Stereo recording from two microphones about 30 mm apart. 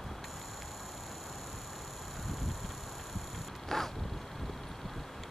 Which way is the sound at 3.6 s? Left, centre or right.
Centre.